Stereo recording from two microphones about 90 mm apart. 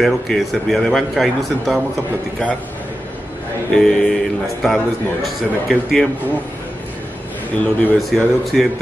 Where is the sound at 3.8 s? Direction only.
5° left (ahead or behind).